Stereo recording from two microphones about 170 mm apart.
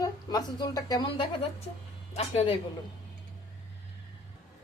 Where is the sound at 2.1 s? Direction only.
40° left (ahead or behind).